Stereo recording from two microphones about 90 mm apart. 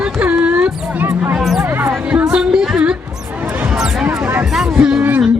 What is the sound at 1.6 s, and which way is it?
Music, 25° right (ahead or behind).